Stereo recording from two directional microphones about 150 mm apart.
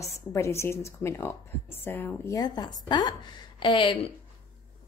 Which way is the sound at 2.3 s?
25° left (ahead or behind).